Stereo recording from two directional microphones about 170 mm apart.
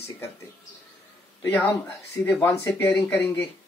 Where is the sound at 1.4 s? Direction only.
15° left (ahead or behind).